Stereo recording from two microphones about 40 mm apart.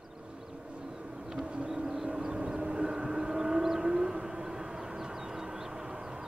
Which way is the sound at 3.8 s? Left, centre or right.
Centre.